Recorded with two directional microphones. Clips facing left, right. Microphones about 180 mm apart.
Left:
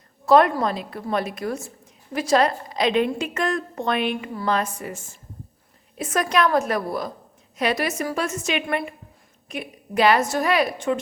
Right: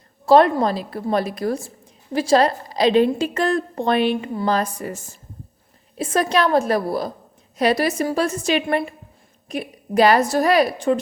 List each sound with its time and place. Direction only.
0.3 s a woman's voice: 30° right (ahead or behind)